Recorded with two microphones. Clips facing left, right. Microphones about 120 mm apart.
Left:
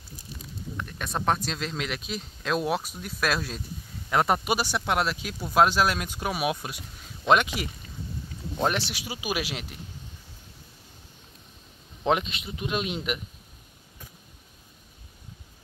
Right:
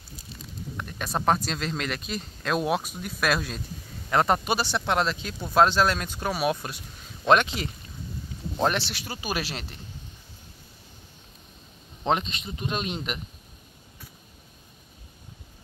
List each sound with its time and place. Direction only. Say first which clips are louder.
0.8 s speech: right 2 dB; centre (ahead or behind)
12.0 s speech: left 1 dB; 10° left (ahead or behind)